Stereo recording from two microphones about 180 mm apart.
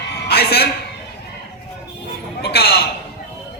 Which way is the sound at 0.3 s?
60° left (ahead or behind).